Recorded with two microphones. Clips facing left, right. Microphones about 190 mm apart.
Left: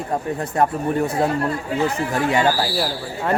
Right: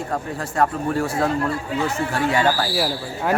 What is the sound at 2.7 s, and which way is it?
Speech, 5° right (ahead or behind).